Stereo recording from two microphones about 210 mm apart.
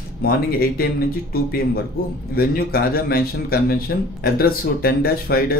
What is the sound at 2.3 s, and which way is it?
Speech, 45° left (ahead or behind).